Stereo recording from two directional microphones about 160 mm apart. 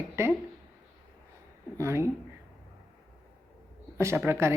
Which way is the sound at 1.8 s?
15° right (ahead or behind).